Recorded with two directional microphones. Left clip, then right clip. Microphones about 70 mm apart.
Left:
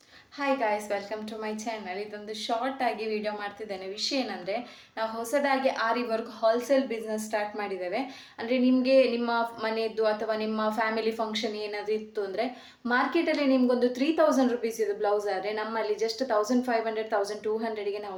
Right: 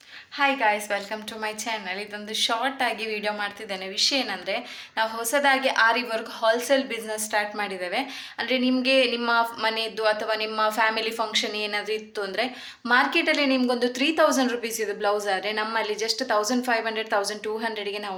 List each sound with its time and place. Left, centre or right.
0.3 s a woman's voice: left